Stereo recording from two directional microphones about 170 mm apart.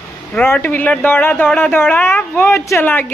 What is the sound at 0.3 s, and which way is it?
A man's voice, 10° left (ahead or behind).